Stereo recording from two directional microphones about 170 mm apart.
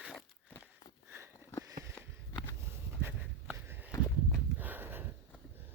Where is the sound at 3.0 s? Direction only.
15° right (ahead or behind).